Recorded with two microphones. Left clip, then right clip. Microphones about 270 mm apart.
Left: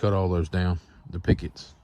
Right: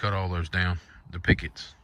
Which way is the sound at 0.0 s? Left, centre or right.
Left.